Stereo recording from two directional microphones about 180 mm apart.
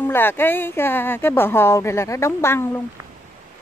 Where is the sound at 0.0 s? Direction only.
10° left (ahead or behind).